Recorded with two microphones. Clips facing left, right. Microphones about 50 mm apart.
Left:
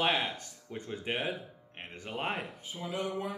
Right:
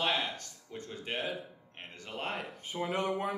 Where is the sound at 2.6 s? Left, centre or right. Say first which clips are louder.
Right 3 dB; right.